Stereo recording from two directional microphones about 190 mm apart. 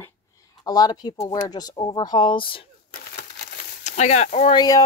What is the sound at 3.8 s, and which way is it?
Speech, 35° left (ahead or behind).